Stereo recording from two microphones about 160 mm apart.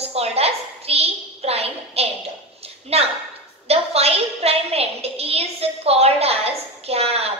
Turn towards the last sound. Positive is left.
turn(degrees=-40)  # may be behind; listen again after turning